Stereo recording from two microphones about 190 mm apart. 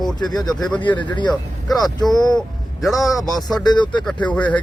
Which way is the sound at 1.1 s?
25° left (ahead or behind).